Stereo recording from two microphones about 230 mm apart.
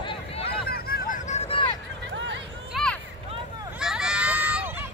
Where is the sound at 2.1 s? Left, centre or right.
Right.